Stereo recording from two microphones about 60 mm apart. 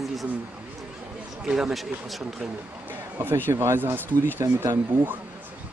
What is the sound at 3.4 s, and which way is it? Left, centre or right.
Speech, right.